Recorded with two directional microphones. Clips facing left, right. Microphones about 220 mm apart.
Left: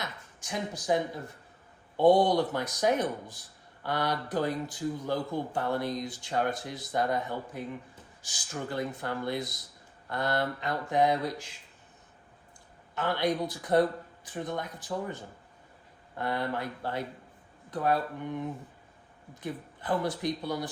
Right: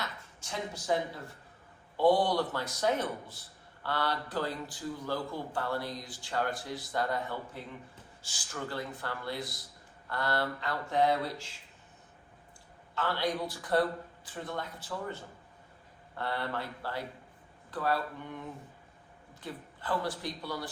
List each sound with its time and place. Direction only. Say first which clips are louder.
0.0 s a sound: left 1 dB; 15° left (ahead or behind)
2.0 s speech: left 4 dB; 20° left (ahead or behind)
13.0 s speech: left 4 dB; 20° left (ahead or behind)
19.3 s speech: left 5 dB; 20° left (ahead or behind)